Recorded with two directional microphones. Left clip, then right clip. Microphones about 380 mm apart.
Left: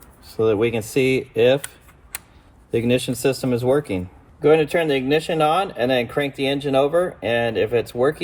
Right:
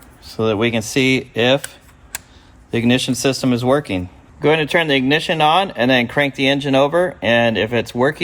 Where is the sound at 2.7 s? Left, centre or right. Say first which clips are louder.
Right 2 dB; centre.